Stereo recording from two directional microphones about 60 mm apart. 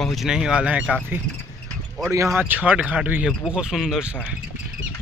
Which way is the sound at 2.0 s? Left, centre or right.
Right.